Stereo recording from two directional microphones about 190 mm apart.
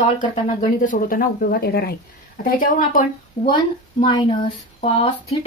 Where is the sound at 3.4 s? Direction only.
25° left (ahead or behind).